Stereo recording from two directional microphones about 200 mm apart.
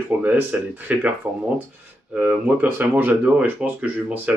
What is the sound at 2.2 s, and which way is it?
Speech, 10° right (ahead or behind).